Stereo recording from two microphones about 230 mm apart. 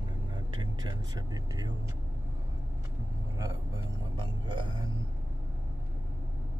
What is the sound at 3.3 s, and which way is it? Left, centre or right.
Vehicle, centre.